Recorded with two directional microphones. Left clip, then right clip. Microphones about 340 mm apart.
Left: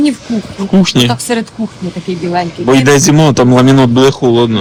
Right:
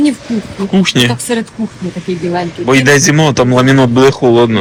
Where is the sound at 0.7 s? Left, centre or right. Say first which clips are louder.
Left 1 dB; centre.